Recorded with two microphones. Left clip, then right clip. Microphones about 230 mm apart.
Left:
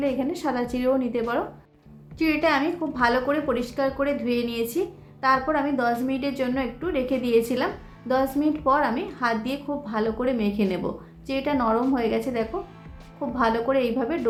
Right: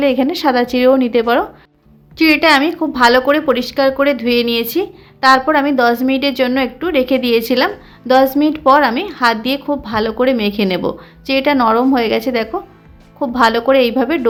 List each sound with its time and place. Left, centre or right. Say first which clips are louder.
0.0 s a woman's voice: right 12 dB; right